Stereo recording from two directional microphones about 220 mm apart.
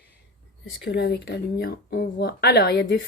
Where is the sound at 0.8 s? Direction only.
50° left (ahead or behind).